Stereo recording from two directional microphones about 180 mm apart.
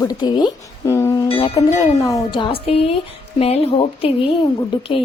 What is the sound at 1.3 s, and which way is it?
A woman's voice, 30° left (ahead or behind).